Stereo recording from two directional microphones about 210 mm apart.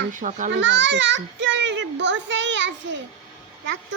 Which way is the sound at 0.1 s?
35° right (ahead or behind).